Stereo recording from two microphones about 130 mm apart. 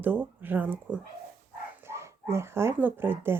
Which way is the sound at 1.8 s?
20° right (ahead or behind).